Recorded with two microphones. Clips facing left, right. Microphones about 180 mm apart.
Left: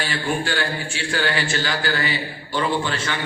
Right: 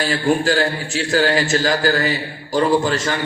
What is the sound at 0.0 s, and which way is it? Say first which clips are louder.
A man's voice: right 7 dB; 40° right (ahead or behind).